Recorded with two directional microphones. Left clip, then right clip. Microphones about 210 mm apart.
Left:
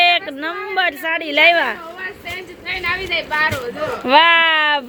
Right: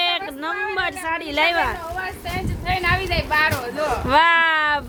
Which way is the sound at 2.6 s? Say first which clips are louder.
Right 1 dB; 55° right (ahead or behind).